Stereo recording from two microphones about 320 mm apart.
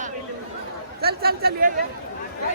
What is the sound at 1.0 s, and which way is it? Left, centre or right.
Speech, right.